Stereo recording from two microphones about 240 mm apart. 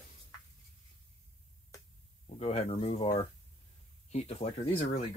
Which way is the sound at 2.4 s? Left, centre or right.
Left.